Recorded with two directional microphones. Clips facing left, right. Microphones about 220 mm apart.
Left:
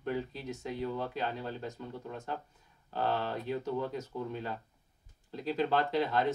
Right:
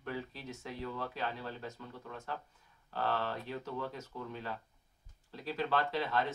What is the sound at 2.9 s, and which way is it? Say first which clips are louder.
Speech: left 3 dB; 20° left (ahead or behind).